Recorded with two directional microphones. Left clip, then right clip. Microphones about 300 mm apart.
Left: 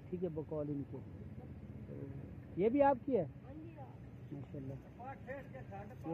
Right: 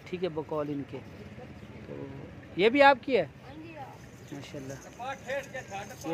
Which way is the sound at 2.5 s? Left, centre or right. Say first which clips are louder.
Right 11 dB; centre.